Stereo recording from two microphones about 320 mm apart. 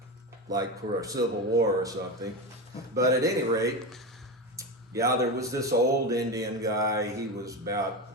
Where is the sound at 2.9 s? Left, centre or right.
Centre.